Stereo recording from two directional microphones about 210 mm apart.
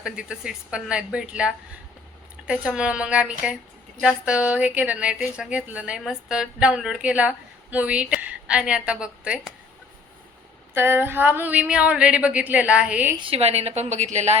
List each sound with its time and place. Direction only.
0.0 s a woman's voice: 5° right (ahead or behind)
10.8 s a woman's voice: 10° right (ahead or behind)
13.2 s a woman's voice: 30° right (ahead or behind)